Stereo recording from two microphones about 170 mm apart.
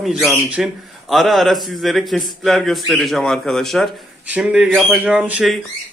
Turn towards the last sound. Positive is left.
turn(degrees=-5)  # may be behind; listen again after turning